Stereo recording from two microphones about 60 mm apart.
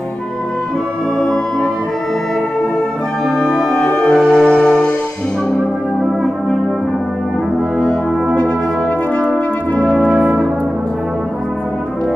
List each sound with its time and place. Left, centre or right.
1.2 s music: centre
3.3 s music: centre
10.0 s brass instrument: centre